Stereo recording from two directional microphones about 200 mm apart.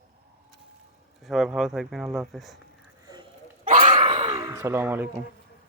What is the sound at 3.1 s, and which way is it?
Goat, 20° right (ahead or behind).